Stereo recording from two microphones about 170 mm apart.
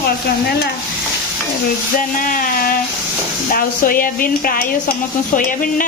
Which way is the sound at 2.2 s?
55° left (ahead or behind).